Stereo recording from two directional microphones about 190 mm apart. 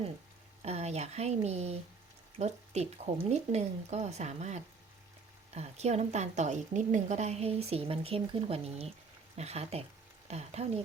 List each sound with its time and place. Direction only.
0.6 s a woman's voice: 35° right (ahead or behind)